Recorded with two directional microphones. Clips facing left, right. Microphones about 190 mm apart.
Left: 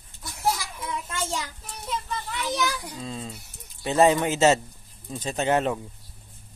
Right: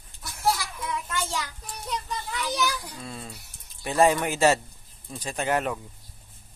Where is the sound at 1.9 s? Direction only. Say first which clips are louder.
Left 1 dB; centre (ahead or behind).